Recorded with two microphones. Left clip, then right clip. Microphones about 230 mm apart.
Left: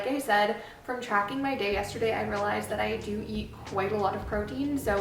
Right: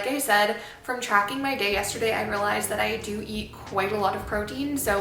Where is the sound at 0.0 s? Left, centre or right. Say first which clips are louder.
Right 3 dB; centre.